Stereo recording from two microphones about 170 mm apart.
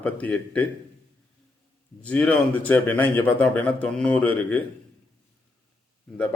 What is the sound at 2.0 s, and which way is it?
A man's voice, 10° left (ahead or behind).